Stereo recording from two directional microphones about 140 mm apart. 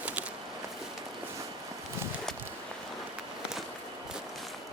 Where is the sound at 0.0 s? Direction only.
10° right (ahead or behind).